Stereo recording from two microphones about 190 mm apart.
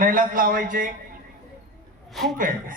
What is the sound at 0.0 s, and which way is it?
Speech, 45° right (ahead or behind).